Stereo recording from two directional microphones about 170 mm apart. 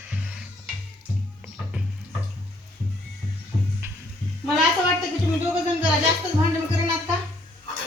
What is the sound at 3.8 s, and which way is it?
Music, 15° right (ahead or behind).